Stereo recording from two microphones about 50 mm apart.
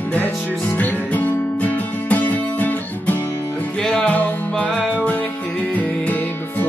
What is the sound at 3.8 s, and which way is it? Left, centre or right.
Music, centre.